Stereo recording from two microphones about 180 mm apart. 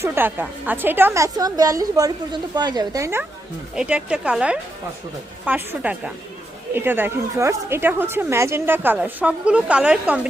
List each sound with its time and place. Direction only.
0.0 s a woman's voice: 10° right (ahead or behind)